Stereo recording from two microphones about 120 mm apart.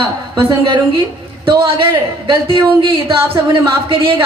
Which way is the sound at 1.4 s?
40° right (ahead or behind).